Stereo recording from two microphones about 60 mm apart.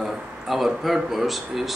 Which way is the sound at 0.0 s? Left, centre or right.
Centre.